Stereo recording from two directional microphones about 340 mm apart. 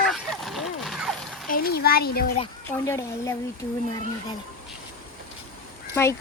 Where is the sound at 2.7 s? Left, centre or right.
Centre.